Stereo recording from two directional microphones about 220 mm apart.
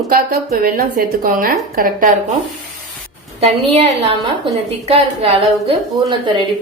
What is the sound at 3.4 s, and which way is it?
A woman's voice, 25° right (ahead or behind).